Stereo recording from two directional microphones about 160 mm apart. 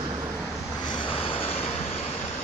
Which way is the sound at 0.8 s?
30° left (ahead or behind).